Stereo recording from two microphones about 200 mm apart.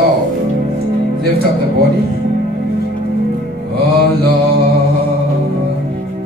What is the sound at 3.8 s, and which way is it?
Mantra, 50° right (ahead or behind).